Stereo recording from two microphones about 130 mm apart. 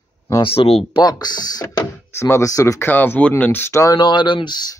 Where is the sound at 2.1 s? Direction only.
20° left (ahead or behind).